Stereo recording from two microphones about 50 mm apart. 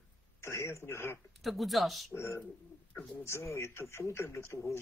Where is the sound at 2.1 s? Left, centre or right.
Left.